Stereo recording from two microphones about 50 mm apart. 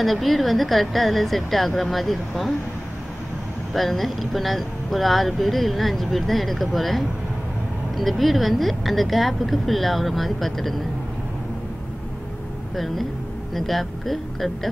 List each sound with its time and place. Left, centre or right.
0.0 s speech: centre
3.7 s speech: centre
12.7 s speech: centre